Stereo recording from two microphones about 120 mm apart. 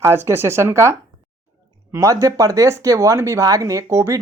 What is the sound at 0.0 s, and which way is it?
Speech, 20° right (ahead or behind).